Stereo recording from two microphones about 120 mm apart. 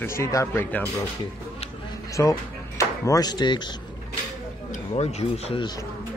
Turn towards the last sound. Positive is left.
turn(degrees=65)  # may be behind; listen again after turning